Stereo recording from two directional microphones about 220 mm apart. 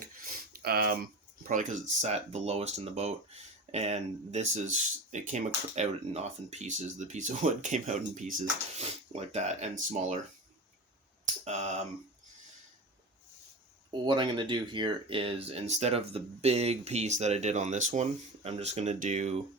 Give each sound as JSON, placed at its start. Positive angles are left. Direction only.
{"t": 0.3, "sound": "a sound", "side_deg": -45}
{"t": 1.5, "sound": "speech", "side_deg": -35}
{"t": 11.4, "sound": "speech", "side_deg": -30}
{"t": 14.0, "sound": "speech", "side_deg": -20}